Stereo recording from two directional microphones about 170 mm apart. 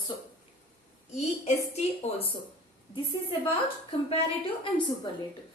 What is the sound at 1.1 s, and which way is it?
A woman's voice, 40° left (ahead or behind).